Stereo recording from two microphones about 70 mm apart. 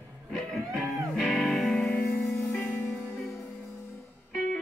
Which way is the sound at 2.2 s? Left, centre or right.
Left.